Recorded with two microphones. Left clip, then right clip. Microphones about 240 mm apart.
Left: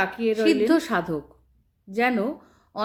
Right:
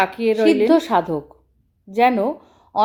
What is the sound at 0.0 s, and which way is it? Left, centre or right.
Speech, centre.